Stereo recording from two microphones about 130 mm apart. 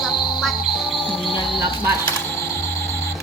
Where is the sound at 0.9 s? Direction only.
Centre (ahead or behind).